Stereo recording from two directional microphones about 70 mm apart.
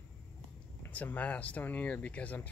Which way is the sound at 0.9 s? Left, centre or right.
Left.